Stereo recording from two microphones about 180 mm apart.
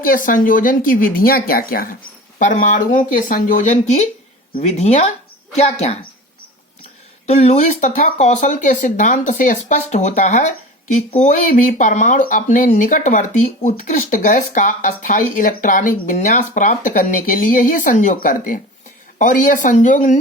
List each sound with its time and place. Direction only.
0.0 s speech: 50° left (ahead or behind)
7.3 s speech: 40° left (ahead or behind)